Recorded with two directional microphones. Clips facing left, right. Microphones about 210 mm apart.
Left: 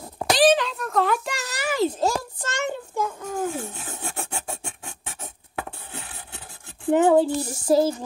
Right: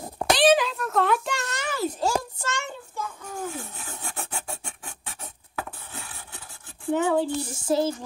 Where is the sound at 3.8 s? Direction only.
40° left (ahead or behind).